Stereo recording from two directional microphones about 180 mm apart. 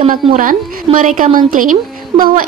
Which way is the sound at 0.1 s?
50° right (ahead or behind).